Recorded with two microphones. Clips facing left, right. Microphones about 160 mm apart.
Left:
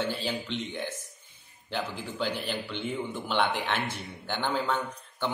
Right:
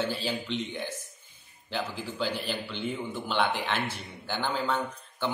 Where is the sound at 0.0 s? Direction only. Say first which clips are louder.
Even; 10° right (ahead or behind).